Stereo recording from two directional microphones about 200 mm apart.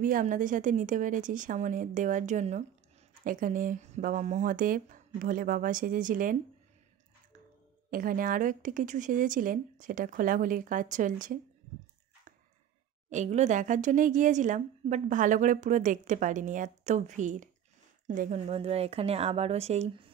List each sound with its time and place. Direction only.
0.0 s speech: 40° right (ahead or behind)
7.9 s speech: 45° right (ahead or behind)
13.1 s speech: 35° right (ahead or behind)
18.5 s speech: 30° right (ahead or behind)